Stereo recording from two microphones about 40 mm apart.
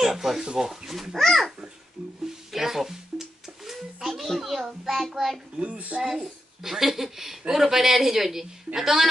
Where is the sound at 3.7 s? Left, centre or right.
Centre.